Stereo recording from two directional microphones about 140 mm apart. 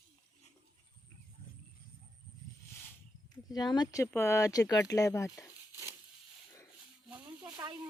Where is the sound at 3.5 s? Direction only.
30° left (ahead or behind).